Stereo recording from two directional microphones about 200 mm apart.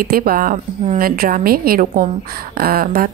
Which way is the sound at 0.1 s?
50° right (ahead or behind).